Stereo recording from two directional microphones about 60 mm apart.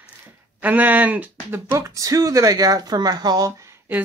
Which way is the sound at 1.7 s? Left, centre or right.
Right.